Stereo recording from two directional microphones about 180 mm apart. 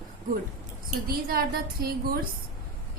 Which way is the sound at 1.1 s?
55° right (ahead or behind).